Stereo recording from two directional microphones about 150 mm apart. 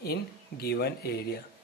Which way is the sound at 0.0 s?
90° left.